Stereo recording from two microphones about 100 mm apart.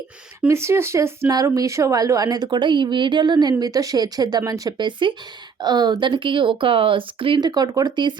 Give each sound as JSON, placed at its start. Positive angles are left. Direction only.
{"t": 0.4, "sound": "speech", "side_deg": -30}
{"t": 1.3, "sound": "a woman's voice", "side_deg": -40}
{"t": 4.8, "sound": "speech", "side_deg": -55}
{"t": 7.4, "sound": "speech", "side_deg": -40}